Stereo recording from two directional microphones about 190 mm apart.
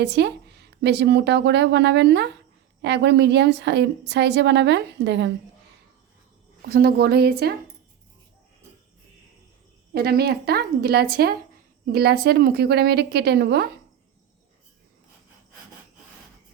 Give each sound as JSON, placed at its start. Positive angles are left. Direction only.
{"t": 0.0, "sound": "a woman's voice", "side_deg": -65}
{"t": 6.7, "sound": "a woman's voice", "side_deg": -50}
{"t": 9.9, "sound": "a woman's voice", "side_deg": -55}